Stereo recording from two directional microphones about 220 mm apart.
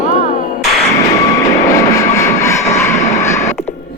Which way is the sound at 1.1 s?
15° left (ahead or behind).